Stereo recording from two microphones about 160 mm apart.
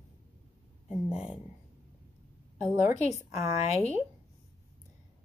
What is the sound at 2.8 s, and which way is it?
Speech, 15° right (ahead or behind).